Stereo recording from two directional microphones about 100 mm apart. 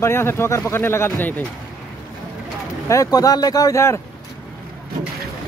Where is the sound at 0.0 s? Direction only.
25° left (ahead or behind).